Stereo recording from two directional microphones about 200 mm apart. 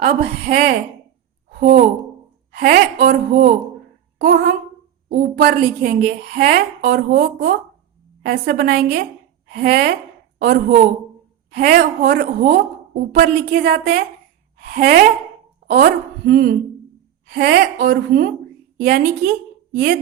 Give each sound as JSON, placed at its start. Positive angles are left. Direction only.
{"t": 0.0, "sound": "a woman's voice", "side_deg": -45}
{"t": 1.5, "sound": "a sound", "side_deg": -45}
{"t": 2.5, "sound": "a woman's voice", "side_deg": -50}
{"t": 4.2, "sound": "a woman's voice", "side_deg": -60}
{"t": 19.7, "sound": "a woman's voice", "side_deg": -55}